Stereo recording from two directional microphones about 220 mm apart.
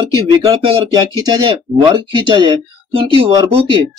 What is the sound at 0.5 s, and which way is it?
Speech, 20° right (ahead or behind).